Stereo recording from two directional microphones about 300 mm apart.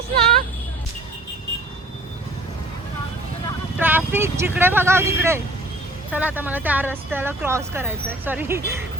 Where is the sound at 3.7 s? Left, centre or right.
Centre.